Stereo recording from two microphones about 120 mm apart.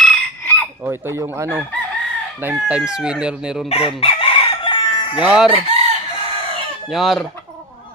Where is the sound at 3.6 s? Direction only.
50° left (ahead or behind).